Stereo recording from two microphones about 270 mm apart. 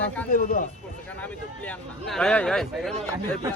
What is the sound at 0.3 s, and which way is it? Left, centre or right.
Speech, left.